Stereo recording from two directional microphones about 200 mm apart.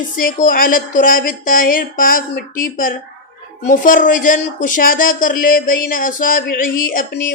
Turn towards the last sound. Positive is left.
turn(degrees=45)  # may be behind; listen again after turning